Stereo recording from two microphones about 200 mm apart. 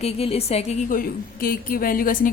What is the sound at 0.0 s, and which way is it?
A woman's voice, 30° left (ahead or behind).